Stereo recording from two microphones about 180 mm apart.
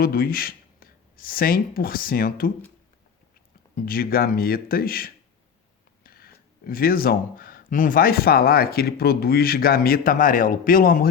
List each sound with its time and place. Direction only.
0.0 s speech: 55° left (ahead or behind)
3.8 s speech: 55° left (ahead or behind)